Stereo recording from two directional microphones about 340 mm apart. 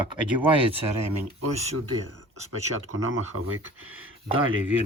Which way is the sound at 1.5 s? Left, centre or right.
Centre.